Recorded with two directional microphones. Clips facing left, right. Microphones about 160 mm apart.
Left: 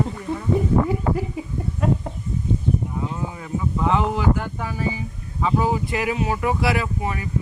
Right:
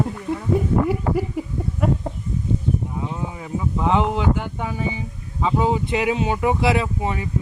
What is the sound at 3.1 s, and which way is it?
Speech, 15° right (ahead or behind).